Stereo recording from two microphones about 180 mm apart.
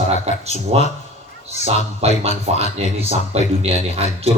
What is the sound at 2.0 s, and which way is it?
A man's voice, 35° right (ahead or behind).